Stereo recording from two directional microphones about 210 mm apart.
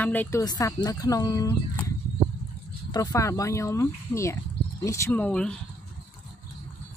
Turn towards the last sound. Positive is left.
turn(degrees=5)  # may be behind; listen again after turning